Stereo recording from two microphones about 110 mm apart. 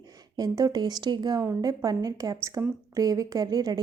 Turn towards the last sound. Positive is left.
turn(degrees=-35)  # may be behind; listen again after turning